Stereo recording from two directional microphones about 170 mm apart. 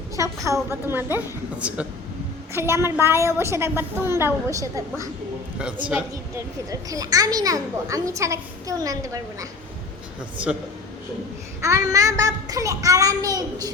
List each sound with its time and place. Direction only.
0.4 s a woman's voice: 15° right (ahead or behind)
5.5 s speech: 5° right (ahead or behind)
5.9 s a child's voice: 20° right (ahead or behind)
10.3 s a woman's voice: 10° right (ahead or behind)
11.6 s a child's voice: 20° right (ahead or behind)